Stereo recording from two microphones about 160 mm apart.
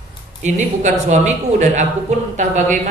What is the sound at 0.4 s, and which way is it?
A woman's voice, 45° right (ahead or behind).